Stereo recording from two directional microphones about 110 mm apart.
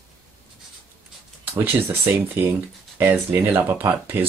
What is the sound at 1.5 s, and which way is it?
Speech, 20° right (ahead or behind).